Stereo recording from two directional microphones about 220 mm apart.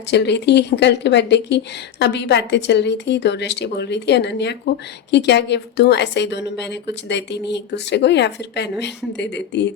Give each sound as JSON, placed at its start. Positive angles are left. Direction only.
{"t": 0.1, "sound": "speech", "side_deg": 50}